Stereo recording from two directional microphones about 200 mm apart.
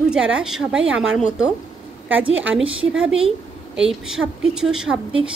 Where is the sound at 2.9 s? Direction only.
5° right (ahead or behind).